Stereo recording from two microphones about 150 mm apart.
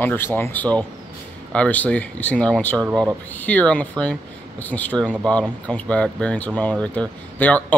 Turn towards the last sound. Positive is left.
turn(degrees=10)  # may be behind; listen again after turning